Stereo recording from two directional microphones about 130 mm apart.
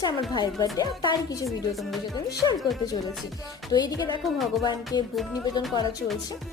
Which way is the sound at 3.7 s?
30° left (ahead or behind).